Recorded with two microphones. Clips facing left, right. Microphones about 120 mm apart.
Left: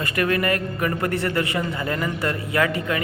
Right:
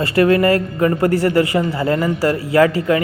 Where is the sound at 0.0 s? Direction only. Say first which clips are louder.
Right 9 dB; 30° right (ahead or behind).